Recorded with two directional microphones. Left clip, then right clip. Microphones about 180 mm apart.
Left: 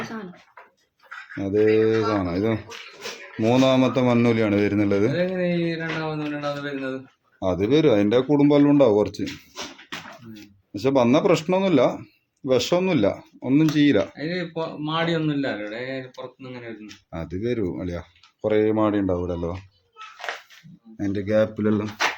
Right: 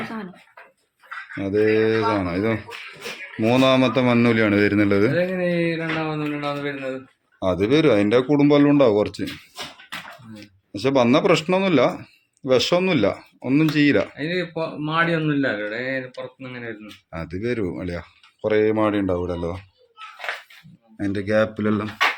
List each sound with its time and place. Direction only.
1.4 s speech: 5° left (ahead or behind)
5.1 s speech: 35° right (ahead or behind)
7.3 s speech: centre (ahead or behind)
10.4 s speech: centre (ahead or behind)
14.2 s speech: 45° right (ahead or behind)
17.1 s speech: 10° left (ahead or behind)
21.0 s speech: centre (ahead or behind)